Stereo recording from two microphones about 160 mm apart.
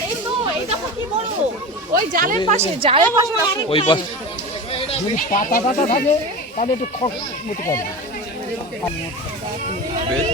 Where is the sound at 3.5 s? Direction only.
30° left (ahead or behind).